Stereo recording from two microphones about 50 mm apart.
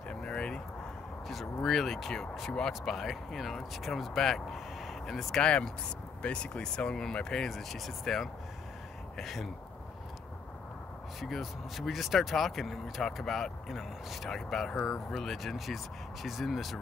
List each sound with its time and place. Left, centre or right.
0.1 s a sound: centre
1.3 s speech: centre
5.4 s speech: left; by 9.5 s centre
11.1 s speech: centre